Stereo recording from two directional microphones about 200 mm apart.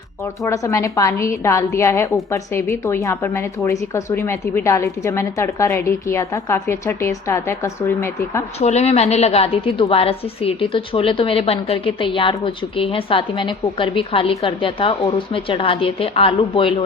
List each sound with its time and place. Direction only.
0.4 s a woman's voice: 15° left (ahead or behind)
8.5 s a woman's voice: 30° left (ahead or behind)